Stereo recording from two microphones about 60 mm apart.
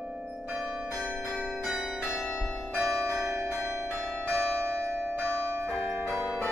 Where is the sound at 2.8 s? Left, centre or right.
Centre.